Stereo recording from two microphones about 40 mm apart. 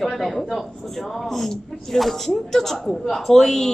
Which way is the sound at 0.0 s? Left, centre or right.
Centre.